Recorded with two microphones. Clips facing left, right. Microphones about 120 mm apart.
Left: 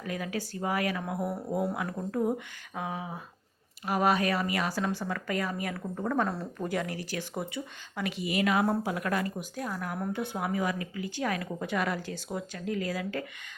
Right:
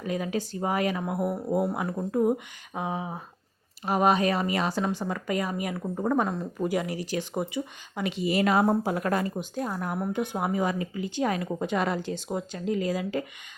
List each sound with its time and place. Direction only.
0.0 s speech: 20° right (ahead or behind)